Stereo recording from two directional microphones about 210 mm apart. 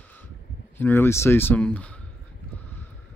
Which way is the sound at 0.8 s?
10° left (ahead or behind).